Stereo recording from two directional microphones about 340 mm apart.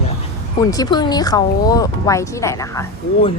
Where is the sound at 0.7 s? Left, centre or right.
Centre.